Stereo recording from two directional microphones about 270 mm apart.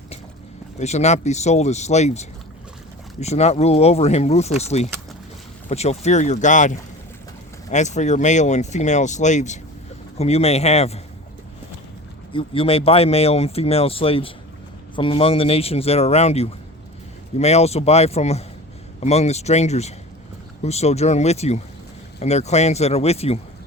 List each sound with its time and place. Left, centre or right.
0.8 s speech: left
12.3 s speech: centre